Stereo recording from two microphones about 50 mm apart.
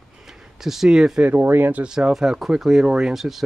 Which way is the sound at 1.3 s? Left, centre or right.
Right.